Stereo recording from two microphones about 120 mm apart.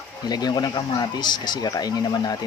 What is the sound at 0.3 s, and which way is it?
Speech, 35° left (ahead or behind).